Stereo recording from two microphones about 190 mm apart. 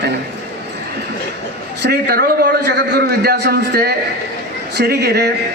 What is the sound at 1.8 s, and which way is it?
Speech, 60° right (ahead or behind).